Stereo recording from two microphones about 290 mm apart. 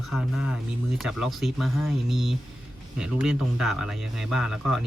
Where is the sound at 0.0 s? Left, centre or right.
Centre.